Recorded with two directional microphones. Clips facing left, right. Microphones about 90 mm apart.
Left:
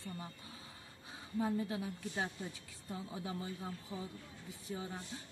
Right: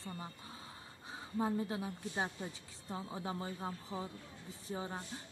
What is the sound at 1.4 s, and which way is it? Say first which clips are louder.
Speech: even; 30° right (ahead or behind).